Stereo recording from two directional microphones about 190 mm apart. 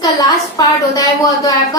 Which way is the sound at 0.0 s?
20° left (ahead or behind).